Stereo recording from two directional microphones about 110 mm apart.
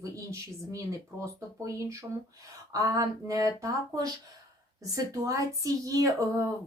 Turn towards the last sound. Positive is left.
turn(degrees=-30)  # may be behind; listen again after turning